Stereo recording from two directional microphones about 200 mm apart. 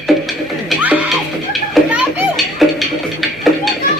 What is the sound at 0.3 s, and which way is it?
Music, 5° right (ahead or behind).